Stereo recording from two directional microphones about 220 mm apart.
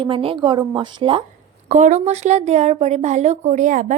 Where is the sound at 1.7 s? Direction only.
35° right (ahead or behind).